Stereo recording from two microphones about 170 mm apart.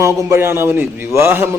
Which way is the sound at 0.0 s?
15° right (ahead or behind).